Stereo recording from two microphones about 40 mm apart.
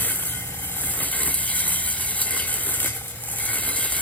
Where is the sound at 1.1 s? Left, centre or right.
Left.